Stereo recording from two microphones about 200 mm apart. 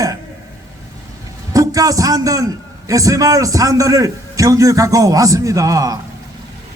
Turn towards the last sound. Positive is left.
turn(degrees=-15)  # may be behind; listen again after turning